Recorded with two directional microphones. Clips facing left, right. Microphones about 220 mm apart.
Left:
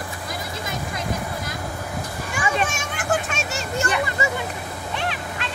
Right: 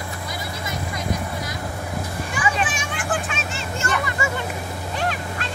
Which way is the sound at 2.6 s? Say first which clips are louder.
Even; 45° left (ahead or behind).